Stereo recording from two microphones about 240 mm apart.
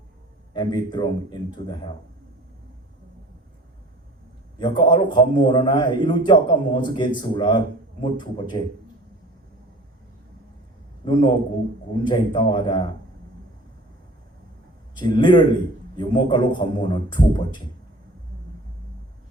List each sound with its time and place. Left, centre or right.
0.5 s a man's voice: centre
4.6 s a man's voice: centre
11.0 s a man's voice: centre
14.9 s a man's voice: centre